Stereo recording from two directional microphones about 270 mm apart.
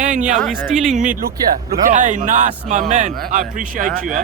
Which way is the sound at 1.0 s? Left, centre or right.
Right.